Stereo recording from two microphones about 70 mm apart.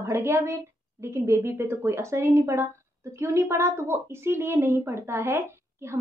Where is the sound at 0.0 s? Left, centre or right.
Right.